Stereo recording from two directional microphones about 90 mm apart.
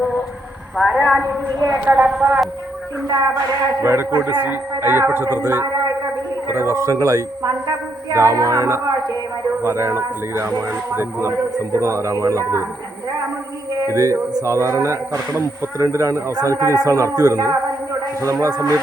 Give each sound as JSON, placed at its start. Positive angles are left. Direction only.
{"t": 0.8, "sound": "speech", "side_deg": 0}
{"t": 1.8, "sound": "speech", "side_deg": -15}
{"t": 2.0, "sound": "speech", "side_deg": -5}
{"t": 3.1, "sound": "a man's voice", "side_deg": -40}
{"t": 3.8, "sound": "a man's voice", "side_deg": -30}
{"t": 13.8, "sound": "a man's voice", "side_deg": -35}